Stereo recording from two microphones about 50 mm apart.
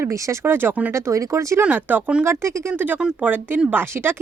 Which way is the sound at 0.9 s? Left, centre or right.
Right.